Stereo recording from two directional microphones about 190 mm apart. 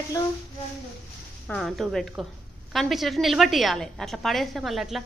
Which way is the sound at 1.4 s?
5° left (ahead or behind).